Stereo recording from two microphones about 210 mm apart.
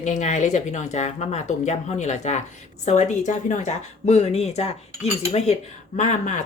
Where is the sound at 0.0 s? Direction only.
35° left (ahead or behind).